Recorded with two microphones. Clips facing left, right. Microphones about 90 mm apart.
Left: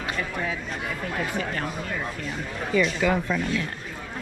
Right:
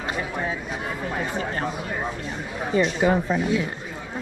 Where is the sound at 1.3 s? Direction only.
30° right (ahead or behind).